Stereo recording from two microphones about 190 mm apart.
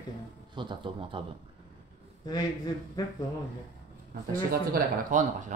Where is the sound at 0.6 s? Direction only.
25° right (ahead or behind).